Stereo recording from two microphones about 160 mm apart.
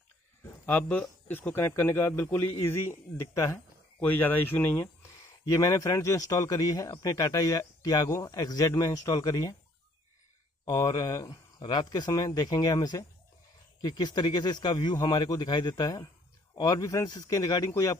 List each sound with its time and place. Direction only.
0.7 s a man's voice: 10° left (ahead or behind)
10.6 s a man's voice: 25° left (ahead or behind)